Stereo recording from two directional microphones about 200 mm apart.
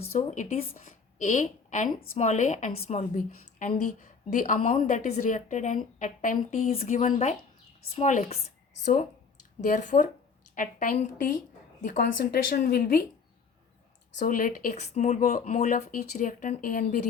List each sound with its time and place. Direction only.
0.2 s a woman's voice: 40° left (ahead or behind)
14.2 s a woman's voice: 45° left (ahead or behind)